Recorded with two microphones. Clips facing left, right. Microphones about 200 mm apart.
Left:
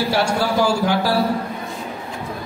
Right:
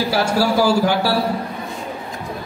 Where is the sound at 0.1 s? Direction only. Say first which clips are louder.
Right 2 dB; 5° right (ahead or behind).